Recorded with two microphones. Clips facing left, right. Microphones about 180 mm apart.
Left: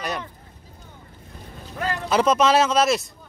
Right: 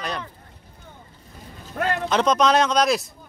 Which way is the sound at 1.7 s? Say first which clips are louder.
Right 3 dB; 60° right (ahead or behind).